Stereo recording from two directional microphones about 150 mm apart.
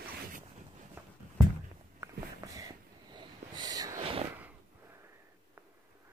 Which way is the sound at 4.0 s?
40° right (ahead or behind).